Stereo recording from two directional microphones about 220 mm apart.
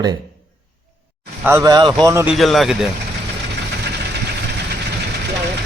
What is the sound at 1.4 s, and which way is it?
Speech, 10° right (ahead or behind).